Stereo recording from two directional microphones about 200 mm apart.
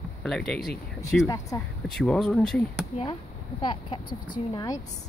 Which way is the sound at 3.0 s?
25° left (ahead or behind).